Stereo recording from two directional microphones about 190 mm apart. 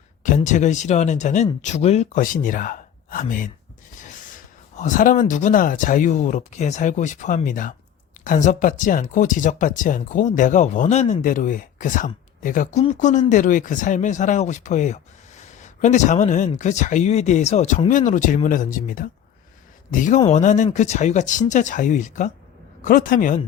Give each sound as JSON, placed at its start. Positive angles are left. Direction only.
{"t": 0.2, "sound": "speech", "side_deg": 40}
{"t": 4.8, "sound": "speech", "side_deg": 45}